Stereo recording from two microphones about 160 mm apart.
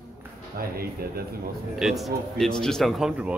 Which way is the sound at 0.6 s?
70° right (ahead or behind).